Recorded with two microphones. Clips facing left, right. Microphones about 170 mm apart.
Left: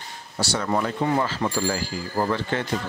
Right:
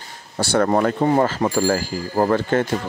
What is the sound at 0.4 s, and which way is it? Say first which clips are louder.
Speech: right 7 dB; 55° right (ahead or behind).